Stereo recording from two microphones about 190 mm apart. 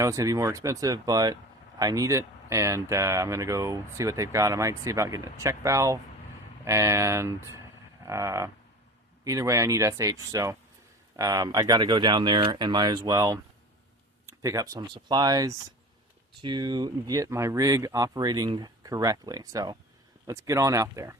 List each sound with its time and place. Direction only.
0.0 s speech: 15° right (ahead or behind)
8.0 s livestock: 15° right (ahead or behind)
9.2 s speech: 15° right (ahead or behind)